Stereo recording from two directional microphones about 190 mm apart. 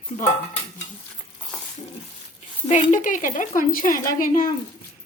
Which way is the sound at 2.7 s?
40° left (ahead or behind).